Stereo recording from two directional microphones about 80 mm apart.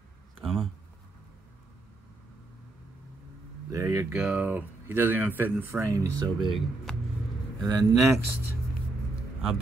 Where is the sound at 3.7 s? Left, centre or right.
Right.